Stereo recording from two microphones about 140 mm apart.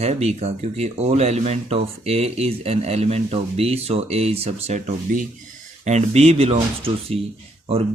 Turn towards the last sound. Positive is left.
turn(degrees=-45)  # may be behind; listen again after turning